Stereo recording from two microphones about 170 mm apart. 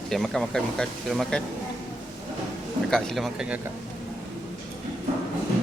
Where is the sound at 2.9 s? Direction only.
5° left (ahead or behind).